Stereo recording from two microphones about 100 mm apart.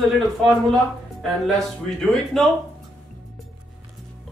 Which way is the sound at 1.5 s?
5° left (ahead or behind).